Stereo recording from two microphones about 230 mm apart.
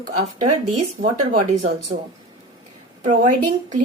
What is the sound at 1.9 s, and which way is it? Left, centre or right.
A woman's voice, right.